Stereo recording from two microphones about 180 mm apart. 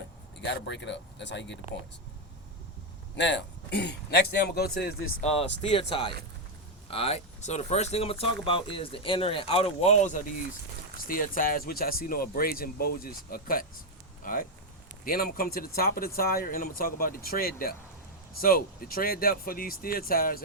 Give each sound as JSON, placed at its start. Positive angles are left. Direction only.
{"t": 0.4, "sound": "speech", "side_deg": 75}
{"t": 3.2, "sound": "speech", "side_deg": 80}
{"t": 5.2, "sound": "speech", "side_deg": 35}
{"t": 10.9, "sound": "speech", "side_deg": 50}